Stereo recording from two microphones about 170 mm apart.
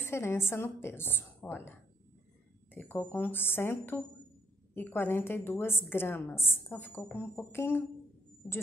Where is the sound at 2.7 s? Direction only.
10° left (ahead or behind).